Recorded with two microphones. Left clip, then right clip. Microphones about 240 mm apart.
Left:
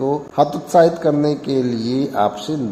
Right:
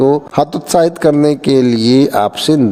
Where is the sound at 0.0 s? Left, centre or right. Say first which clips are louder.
Right 5 dB; right.